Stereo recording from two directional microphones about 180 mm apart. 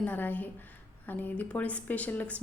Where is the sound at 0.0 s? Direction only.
10° left (ahead or behind).